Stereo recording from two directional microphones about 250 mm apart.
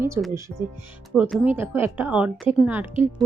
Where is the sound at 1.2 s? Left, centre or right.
Centre.